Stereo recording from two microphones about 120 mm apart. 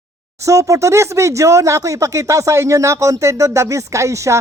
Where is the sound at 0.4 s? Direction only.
25° right (ahead or behind).